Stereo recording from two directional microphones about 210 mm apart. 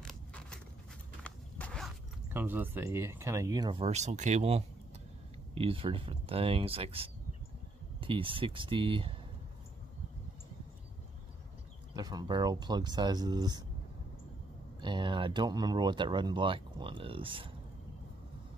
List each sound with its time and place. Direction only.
0.0 s a sound: 5° left (ahead or behind)
1.2 s walk: 5° left (ahead or behind)
2.3 s speech: 10° right (ahead or behind); by 9.1 s 25° right (ahead or behind)
11.9 s speech: 20° right (ahead or behind)
14.8 s speech: 20° right (ahead or behind)